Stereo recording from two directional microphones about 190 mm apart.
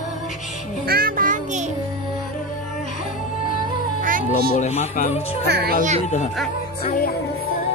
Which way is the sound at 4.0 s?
45° right (ahead or behind).